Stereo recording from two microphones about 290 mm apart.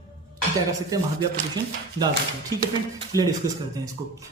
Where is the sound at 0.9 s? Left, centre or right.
Centre.